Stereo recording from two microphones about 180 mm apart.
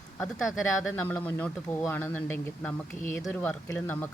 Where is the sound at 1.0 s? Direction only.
10° left (ahead or behind).